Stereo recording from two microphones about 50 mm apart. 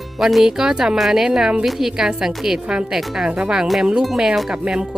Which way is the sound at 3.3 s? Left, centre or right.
Right.